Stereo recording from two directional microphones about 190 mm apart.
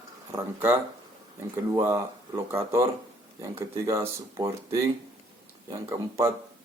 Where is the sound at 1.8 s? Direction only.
15° right (ahead or behind).